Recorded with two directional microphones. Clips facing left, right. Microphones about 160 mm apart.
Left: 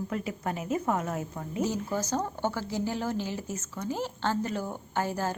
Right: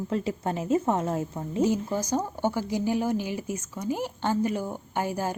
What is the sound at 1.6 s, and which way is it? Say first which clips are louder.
Speech: right 5 dB; 15° right (ahead or behind).